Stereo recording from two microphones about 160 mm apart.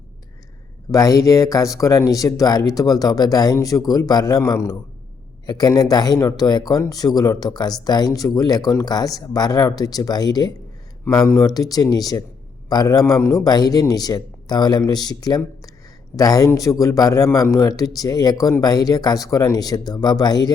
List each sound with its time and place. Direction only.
0.9 s speech: 20° left (ahead or behind)